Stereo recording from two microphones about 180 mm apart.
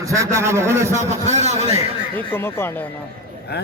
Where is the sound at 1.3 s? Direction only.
40° right (ahead or behind).